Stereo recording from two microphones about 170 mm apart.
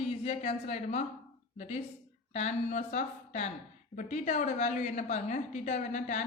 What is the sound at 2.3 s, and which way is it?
A woman's voice, 45° left (ahead or behind).